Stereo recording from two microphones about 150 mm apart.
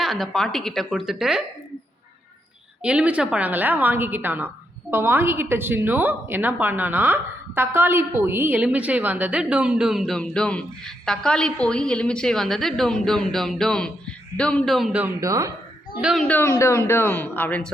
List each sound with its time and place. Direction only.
0.0 s a woman's voice: centre (ahead or behind)
2.8 s a woman's voice: 10° right (ahead or behind)
15.2 s speech: 20° right (ahead or behind)
16.0 s a woman's voice: 5° right (ahead or behind)
16.2 s speech: 10° left (ahead or behind)